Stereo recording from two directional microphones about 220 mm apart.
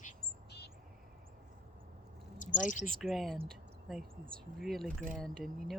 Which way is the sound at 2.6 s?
35° left (ahead or behind).